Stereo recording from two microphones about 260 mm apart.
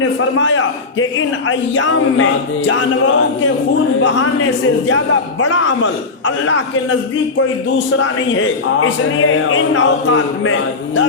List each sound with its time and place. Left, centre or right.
0.0 s a man's voice: left
4.9 s a man's voice: left
7.9 s a man's voice: left